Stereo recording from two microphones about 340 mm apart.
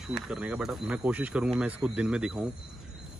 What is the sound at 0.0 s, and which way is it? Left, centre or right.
Speech, centre.